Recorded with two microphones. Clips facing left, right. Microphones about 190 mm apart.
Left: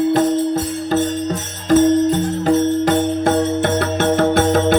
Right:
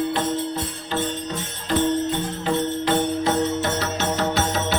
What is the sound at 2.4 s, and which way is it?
Music, 50° left (ahead or behind).